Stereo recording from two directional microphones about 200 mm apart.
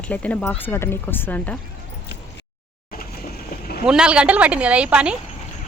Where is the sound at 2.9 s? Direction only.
50° left (ahead or behind).